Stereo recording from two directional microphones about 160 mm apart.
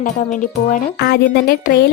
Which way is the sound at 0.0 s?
55° left (ahead or behind).